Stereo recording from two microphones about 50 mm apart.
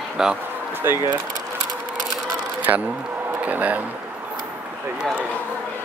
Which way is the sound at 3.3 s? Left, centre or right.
Right.